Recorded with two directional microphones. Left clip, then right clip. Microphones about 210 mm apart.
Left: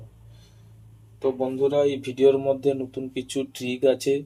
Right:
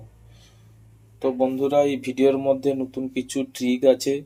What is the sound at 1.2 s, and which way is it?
Speech, 40° right (ahead or behind).